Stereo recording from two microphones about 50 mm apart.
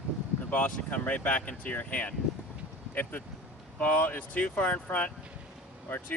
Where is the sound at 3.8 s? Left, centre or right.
Left.